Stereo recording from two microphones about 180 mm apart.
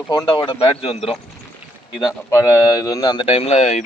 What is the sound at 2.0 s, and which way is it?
Speech, 15° left (ahead or behind).